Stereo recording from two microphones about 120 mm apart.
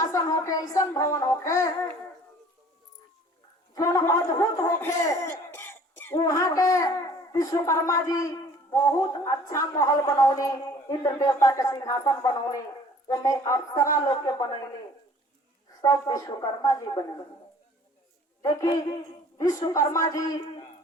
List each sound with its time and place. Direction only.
0.0 s a child's voice: 30° left (ahead or behind)
3.8 s speech: 25° left (ahead or behind)
6.2 s a child's voice: 30° left (ahead or behind)
15.8 s a woman's voice: 30° left (ahead or behind)
18.4 s a woman's voice: 35° left (ahead or behind)